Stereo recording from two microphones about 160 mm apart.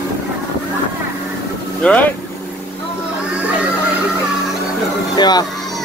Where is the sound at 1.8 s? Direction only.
5° left (ahead or behind).